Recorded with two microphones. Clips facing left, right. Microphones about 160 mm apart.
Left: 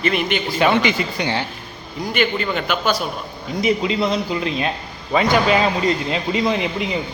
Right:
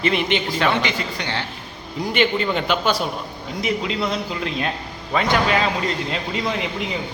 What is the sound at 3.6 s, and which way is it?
A man's voice, centre (ahead or behind).